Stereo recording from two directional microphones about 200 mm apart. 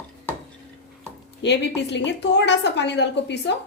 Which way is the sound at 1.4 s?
60° left (ahead or behind).